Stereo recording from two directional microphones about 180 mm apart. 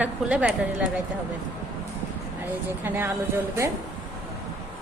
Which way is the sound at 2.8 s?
10° right (ahead or behind).